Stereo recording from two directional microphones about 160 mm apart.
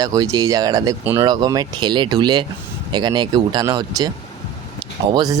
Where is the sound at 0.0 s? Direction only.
20° right (ahead or behind).